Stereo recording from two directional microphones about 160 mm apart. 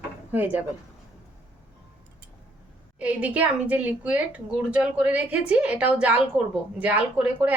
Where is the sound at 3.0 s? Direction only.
10° right (ahead or behind).